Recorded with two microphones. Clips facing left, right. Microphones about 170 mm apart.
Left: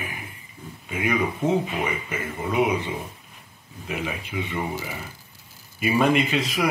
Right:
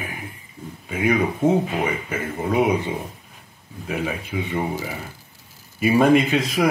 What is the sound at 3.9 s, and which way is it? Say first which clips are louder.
Speech: right 4 dB; 40° right (ahead or behind).